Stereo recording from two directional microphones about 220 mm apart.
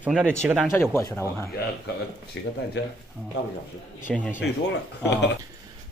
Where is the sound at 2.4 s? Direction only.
55° left (ahead or behind).